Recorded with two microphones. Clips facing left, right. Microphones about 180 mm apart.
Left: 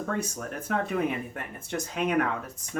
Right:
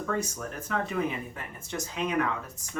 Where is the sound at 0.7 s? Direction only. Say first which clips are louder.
Left 2 dB; 55° left (ahead or behind).